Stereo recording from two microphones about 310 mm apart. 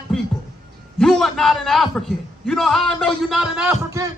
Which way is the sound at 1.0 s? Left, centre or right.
Centre.